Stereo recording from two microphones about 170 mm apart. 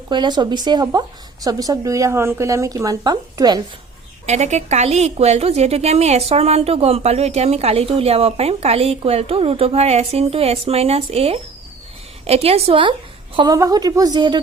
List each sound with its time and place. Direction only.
0.1 s speech: 25° right (ahead or behind)
4.3 s a woman's voice: 40° right (ahead or behind); by 14.3 s 25° right (ahead or behind)